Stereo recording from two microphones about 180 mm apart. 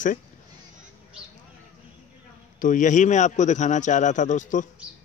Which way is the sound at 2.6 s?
45° left (ahead or behind).